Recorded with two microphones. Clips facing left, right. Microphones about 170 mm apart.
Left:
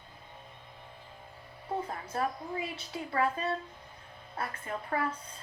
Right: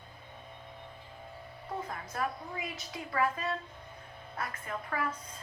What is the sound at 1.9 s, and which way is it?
A woman's voice, 30° left (ahead or behind).